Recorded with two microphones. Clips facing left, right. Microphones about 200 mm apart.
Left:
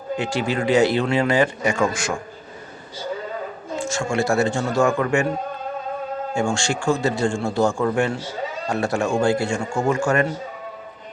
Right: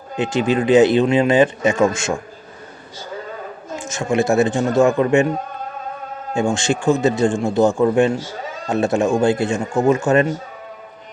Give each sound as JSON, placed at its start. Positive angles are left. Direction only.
{"t": 0.2, "sound": "speech", "side_deg": -20}
{"t": 3.8, "sound": "speech", "side_deg": -20}
{"t": 6.3, "sound": "speech", "side_deg": -20}